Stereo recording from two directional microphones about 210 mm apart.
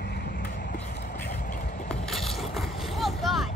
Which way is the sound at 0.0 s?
50° left (ahead or behind).